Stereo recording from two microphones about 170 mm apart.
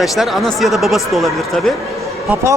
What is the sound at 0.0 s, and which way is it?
A man's voice, centre (ahead or behind).